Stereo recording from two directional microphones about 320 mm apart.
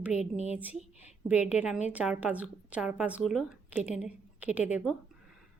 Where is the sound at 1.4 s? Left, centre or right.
Centre.